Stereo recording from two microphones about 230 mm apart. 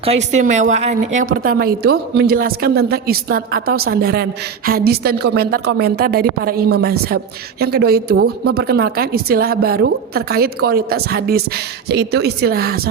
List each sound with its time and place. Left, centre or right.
0.0 s a woman's voice: right